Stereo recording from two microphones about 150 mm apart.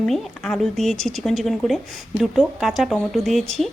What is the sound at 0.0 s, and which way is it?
Speech, centre (ahead or behind).